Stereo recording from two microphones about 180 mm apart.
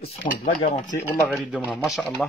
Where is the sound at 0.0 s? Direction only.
45° left (ahead or behind).